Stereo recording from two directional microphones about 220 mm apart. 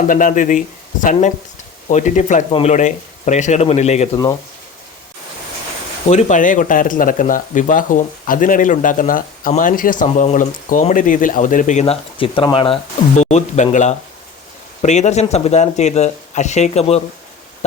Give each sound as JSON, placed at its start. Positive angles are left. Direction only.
{"t": 0.1, "sound": "speech", "side_deg": 35}
{"t": 1.9, "sound": "speech", "side_deg": 35}
{"t": 6.1, "sound": "speech", "side_deg": 35}